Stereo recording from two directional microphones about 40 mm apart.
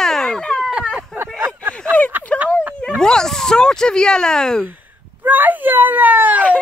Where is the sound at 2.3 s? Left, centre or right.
Left.